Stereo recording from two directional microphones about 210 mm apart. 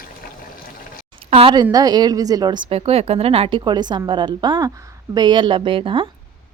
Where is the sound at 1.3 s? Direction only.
25° right (ahead or behind).